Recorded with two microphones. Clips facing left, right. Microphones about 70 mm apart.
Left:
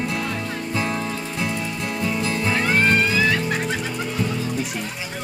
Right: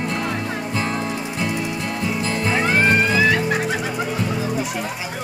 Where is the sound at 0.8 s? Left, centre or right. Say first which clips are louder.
Even; right.